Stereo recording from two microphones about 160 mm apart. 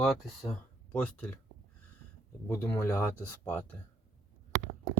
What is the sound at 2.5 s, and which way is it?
Speech, 15° left (ahead or behind).